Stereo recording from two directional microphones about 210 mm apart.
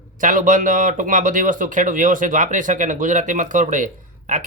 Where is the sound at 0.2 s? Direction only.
40° right (ahead or behind).